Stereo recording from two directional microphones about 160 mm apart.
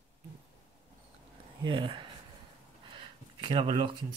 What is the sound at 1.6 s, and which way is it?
Speech, 30° right (ahead or behind).